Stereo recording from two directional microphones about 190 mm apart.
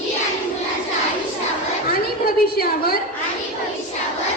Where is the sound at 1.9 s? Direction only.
50° left (ahead or behind).